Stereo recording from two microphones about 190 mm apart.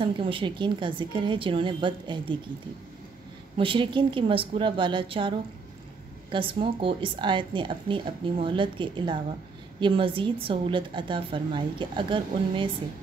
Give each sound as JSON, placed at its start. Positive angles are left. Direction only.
{"t": 0.0, "sound": "speech", "side_deg": -25}
{"t": 3.5, "sound": "speech", "side_deg": -25}
{"t": 6.3, "sound": "speech", "side_deg": -25}